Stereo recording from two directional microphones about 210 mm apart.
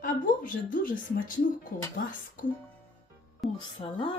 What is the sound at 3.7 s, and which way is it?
Speech, 25° left (ahead or behind).